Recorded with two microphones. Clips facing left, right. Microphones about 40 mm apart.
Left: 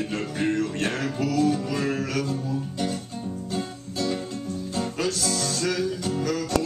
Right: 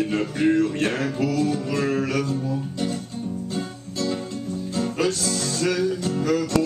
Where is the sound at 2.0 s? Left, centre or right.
Centre.